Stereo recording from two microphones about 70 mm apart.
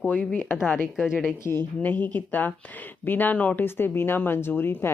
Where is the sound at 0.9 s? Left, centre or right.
Centre.